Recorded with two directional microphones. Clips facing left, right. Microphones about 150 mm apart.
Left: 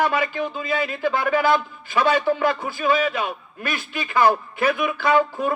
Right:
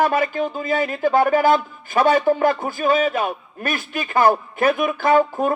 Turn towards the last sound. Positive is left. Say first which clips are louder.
# right 3 dB
turn(degrees=-45)  # may be behind; listen again after turning